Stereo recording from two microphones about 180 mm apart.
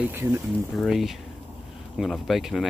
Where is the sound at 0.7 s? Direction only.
Centre (ahead or behind).